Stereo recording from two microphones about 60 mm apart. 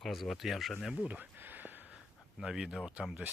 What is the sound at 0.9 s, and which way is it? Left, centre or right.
Speech, right.